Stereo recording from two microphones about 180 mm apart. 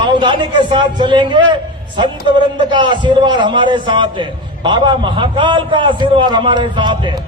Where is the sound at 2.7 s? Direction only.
25° right (ahead or behind).